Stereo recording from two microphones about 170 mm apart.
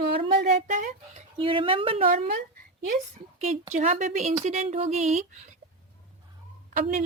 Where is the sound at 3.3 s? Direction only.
40° right (ahead or behind).